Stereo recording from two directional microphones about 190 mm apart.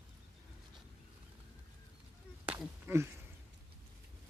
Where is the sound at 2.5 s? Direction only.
10° right (ahead or behind).